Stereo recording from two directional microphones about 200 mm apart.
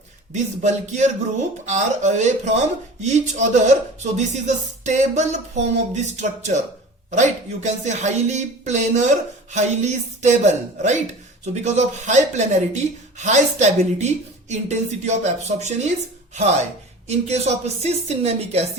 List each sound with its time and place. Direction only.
0.3 s speech: 35° right (ahead or behind)